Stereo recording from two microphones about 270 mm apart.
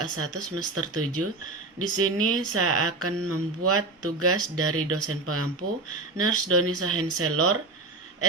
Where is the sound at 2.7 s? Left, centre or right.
Right.